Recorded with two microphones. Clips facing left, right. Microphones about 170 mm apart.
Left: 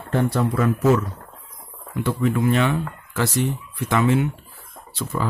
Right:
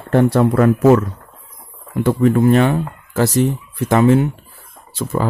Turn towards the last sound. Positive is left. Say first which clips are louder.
# right 6 dB
turn(degrees=-45)  # may be behind; listen again after turning